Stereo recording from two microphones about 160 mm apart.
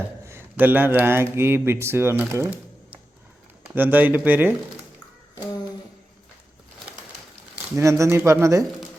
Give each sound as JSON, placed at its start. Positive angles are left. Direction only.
{"t": 0.3, "sound": "speech", "side_deg": -15}
{"t": 7.5, "sound": "speech", "side_deg": -20}